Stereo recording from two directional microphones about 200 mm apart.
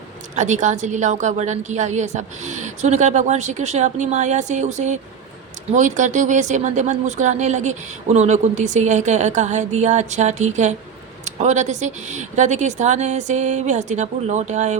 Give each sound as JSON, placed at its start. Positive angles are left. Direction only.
{"t": 0.3, "sound": "speech", "side_deg": -35}